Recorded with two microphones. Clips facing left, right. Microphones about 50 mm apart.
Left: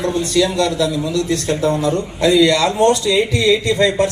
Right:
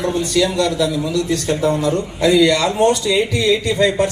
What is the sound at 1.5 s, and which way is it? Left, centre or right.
A man's voice, centre.